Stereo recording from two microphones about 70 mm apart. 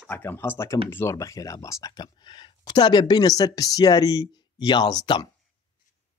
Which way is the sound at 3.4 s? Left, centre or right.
Left.